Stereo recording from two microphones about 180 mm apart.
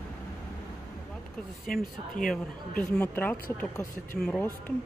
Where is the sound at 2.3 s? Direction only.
5° left (ahead or behind).